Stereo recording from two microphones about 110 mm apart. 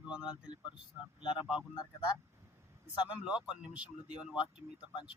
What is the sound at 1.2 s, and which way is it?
Speech, 50° left (ahead or behind).